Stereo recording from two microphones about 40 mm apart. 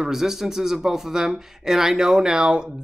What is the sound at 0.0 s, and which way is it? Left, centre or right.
Speech, centre.